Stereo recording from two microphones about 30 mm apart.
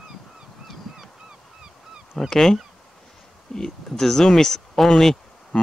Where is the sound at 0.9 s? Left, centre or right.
Centre.